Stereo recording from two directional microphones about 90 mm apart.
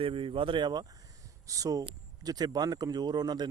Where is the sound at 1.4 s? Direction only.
40° right (ahead or behind).